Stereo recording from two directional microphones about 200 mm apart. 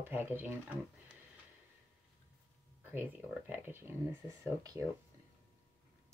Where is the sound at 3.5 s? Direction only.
10° right (ahead or behind).